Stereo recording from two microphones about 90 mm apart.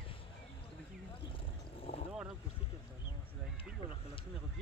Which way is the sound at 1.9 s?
90° left.